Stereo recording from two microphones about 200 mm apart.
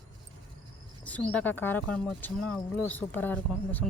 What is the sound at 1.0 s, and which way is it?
Speech, 5° left (ahead or behind).